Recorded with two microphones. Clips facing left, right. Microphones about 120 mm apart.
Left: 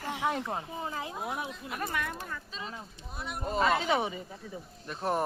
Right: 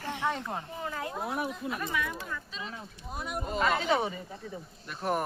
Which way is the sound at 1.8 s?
55° left (ahead or behind).